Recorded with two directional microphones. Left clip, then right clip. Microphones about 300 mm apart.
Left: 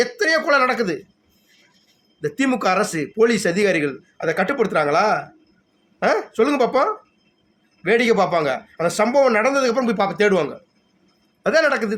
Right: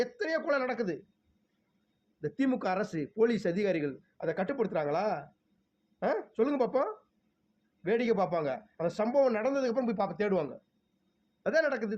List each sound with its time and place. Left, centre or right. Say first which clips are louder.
0.0 s speech: left 13 dB; centre
2.2 s speech: left 12 dB; centre